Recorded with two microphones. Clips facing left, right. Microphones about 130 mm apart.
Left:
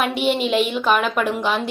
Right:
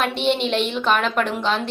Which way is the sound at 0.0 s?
5° left (ahead or behind).